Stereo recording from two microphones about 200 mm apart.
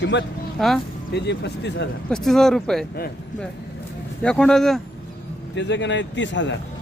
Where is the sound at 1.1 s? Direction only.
60° left (ahead or behind).